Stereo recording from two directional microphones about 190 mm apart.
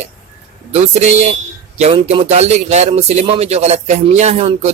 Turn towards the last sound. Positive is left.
turn(degrees=-35)  # may be behind; listen again after turning